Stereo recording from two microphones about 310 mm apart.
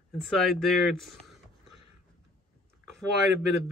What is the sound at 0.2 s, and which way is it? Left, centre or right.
Speech, centre.